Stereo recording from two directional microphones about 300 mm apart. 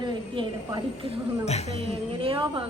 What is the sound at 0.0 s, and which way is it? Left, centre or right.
A woman's voice, centre.